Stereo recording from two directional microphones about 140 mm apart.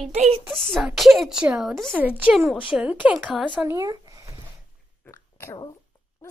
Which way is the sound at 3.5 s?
20° right (ahead or behind).